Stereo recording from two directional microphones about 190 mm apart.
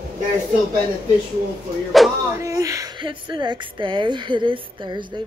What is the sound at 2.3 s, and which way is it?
Speech, 15° right (ahead or behind).